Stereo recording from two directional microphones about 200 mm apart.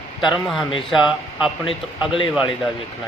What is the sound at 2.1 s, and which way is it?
Speech, 25° left (ahead or behind).